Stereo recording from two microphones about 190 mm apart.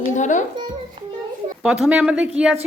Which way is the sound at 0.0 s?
40° left (ahead or behind).